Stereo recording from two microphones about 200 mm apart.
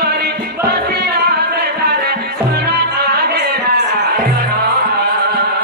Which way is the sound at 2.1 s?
55° right (ahead or behind).